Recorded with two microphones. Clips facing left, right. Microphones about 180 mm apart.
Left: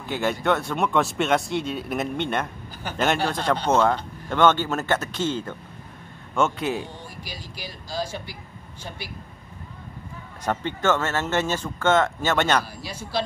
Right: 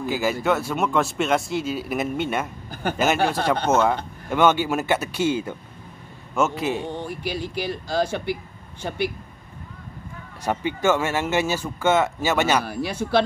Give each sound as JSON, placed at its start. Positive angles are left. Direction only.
{"t": 0.0, "sound": "a man's voice", "side_deg": -5}
{"t": 2.7, "sound": "a sound", "side_deg": -55}
{"t": 3.6, "sound": "a man's voice", "side_deg": -5}
{"t": 6.8, "sound": "speech", "side_deg": -60}
{"t": 10.4, "sound": "speech", "side_deg": -10}
{"t": 12.6, "sound": "speech", "side_deg": -60}